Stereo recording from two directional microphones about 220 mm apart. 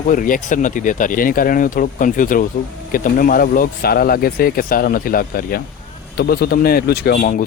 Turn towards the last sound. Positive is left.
turn(degrees=40)  # may be behind; listen again after turning